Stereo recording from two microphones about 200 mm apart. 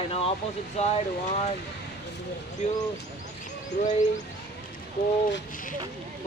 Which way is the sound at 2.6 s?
35° left (ahead or behind).